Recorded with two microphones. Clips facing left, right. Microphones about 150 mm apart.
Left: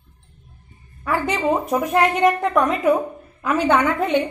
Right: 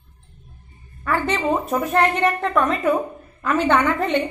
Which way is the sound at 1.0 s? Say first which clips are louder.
Left 1 dB; 10° left (ahead or behind).